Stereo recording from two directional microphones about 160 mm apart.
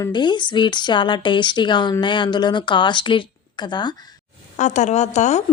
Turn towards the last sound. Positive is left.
turn(degrees=45)  # may be behind; listen again after turning